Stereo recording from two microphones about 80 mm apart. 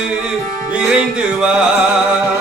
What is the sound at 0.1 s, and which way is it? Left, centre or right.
Music, centre.